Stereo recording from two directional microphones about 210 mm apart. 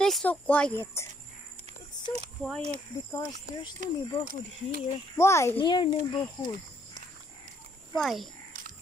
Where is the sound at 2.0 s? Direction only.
30° right (ahead or behind).